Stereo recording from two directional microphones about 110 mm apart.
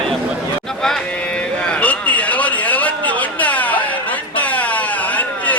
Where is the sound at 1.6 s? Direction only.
10° left (ahead or behind).